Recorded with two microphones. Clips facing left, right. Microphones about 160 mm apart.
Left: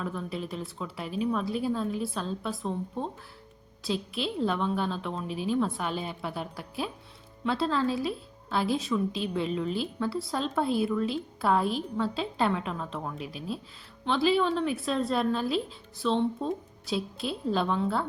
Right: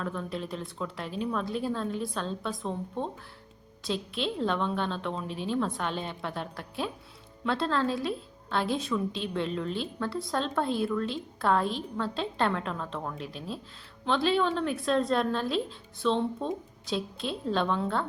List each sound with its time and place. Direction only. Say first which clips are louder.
0.0 s a woman's voice: even; 5° left (ahead or behind)